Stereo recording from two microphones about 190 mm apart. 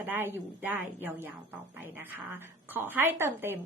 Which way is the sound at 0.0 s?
10° right (ahead or behind).